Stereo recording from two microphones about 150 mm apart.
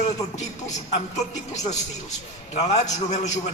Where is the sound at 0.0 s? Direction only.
50° left (ahead or behind).